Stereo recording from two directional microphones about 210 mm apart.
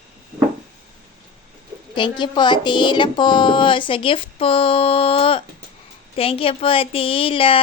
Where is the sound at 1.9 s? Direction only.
20° left (ahead or behind).